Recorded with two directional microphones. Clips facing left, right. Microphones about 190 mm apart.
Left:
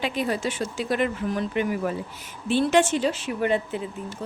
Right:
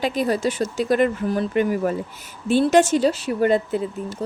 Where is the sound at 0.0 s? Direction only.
40° right (ahead or behind).